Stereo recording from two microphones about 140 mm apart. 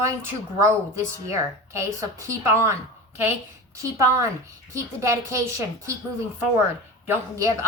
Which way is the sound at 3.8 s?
20° right (ahead or behind).